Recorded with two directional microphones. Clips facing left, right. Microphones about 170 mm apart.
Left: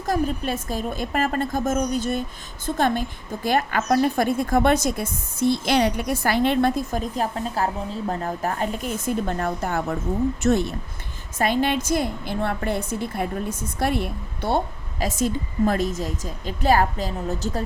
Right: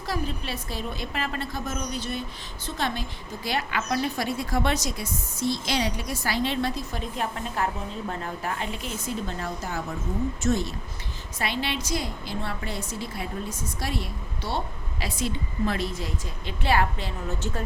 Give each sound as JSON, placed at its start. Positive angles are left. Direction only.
{"t": 0.0, "sound": "a woman's voice", "side_deg": 50}
{"t": 11.3, "sound": "a woman's voice", "side_deg": 45}